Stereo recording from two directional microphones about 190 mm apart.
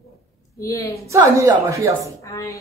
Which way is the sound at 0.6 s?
15° left (ahead or behind).